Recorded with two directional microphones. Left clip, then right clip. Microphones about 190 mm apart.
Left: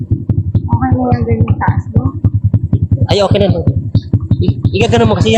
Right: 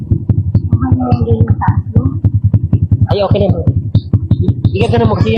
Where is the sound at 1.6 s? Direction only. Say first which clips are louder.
Even; centre (ahead or behind).